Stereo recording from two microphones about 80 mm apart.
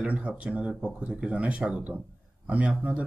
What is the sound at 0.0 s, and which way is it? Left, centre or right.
Speech, centre.